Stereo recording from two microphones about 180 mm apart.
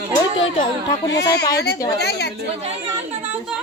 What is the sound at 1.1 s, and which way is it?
Speech, 70° left (ahead or behind).